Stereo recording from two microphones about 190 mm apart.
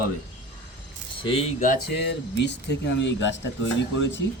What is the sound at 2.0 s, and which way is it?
Speech, 65° left (ahead or behind).